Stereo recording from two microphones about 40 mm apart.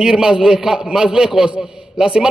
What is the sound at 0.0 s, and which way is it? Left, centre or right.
A man's voice, centre.